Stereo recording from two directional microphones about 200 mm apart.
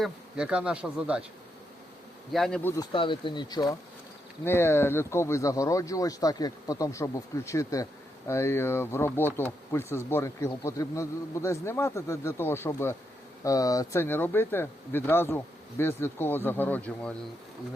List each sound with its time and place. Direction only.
0.0 s speech: 5° right (ahead or behind)
2.3 s speech: 5° left (ahead or behind)
2.7 s speech: 25° left (ahead or behind); by 17.2 s 5° left (ahead or behind)